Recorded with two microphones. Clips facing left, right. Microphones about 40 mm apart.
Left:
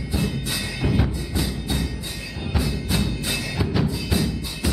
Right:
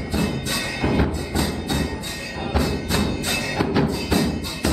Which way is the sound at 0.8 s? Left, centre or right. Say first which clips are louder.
Right 3 dB; centre.